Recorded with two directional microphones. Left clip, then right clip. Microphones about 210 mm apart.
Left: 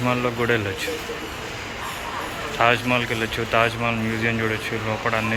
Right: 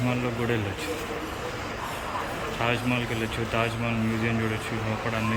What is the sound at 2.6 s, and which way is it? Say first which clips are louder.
Speech: left 9 dB; 10° right (ahead or behind).